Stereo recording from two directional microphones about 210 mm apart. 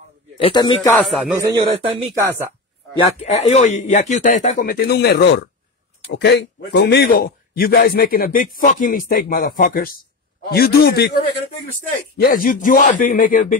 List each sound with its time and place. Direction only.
0.4 s a man's voice: 25° left (ahead or behind)
0.8 s speech: centre (ahead or behind)
1.4 s a man's voice: 20° right (ahead or behind)
2.1 s speech: 10° right (ahead or behind)
3.2 s a man's voice: 30° left (ahead or behind)